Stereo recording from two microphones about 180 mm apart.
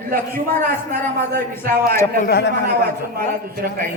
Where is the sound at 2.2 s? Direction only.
60° left (ahead or behind).